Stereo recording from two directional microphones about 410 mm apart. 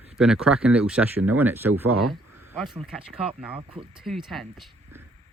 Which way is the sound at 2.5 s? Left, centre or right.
Centre.